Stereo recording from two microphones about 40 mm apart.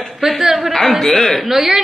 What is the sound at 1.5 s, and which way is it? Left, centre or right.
Speech, centre.